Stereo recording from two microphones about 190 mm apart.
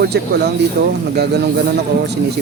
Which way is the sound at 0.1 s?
60° right (ahead or behind).